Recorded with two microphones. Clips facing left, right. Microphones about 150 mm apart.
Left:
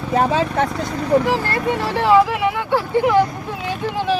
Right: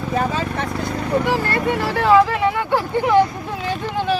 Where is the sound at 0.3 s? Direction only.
90° left.